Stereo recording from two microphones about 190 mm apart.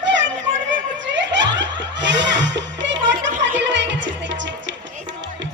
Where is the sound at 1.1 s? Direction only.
70° right (ahead or behind).